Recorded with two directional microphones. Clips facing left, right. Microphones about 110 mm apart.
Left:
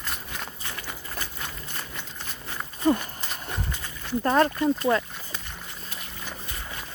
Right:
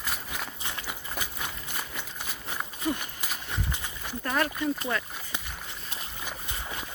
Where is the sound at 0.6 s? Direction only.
15° right (ahead or behind).